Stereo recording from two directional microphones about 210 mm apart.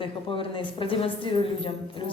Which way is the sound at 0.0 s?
25° left (ahead or behind).